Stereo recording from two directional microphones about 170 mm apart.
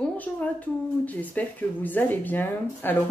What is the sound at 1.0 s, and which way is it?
Speech, 10° left (ahead or behind).